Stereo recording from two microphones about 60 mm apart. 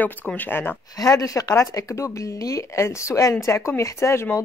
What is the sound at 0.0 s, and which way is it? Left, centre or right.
Speech, left.